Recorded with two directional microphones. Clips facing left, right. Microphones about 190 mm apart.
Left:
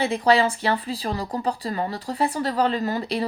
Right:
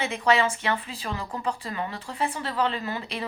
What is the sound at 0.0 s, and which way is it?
Speech, 35° left (ahead or behind).